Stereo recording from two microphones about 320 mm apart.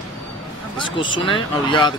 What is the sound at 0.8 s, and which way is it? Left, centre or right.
Speech, centre.